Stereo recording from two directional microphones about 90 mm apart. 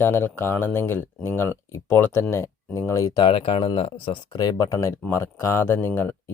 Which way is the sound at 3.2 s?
85° left.